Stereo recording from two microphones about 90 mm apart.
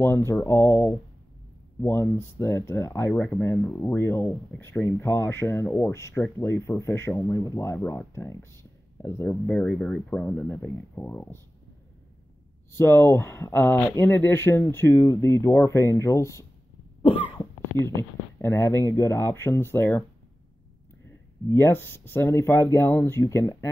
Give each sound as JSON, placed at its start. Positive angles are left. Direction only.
{"t": 0.0, "sound": "speech", "side_deg": 30}
{"t": 3.1, "sound": "speech", "side_deg": 15}
{"t": 3.3, "sound": "speech", "side_deg": 30}
{"t": 9.3, "sound": "speech", "side_deg": 20}
{"t": 12.7, "sound": "speech", "side_deg": 30}
{"t": 17.7, "sound": "speech", "side_deg": 35}
{"t": 21.5, "sound": "speech", "side_deg": 30}